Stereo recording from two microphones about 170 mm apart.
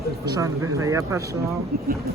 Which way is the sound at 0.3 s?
20° right (ahead or behind).